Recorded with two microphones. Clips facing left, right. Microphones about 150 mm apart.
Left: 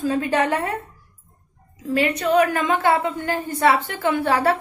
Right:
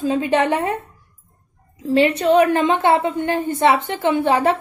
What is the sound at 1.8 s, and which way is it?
A woman's voice, 25° right (ahead or behind).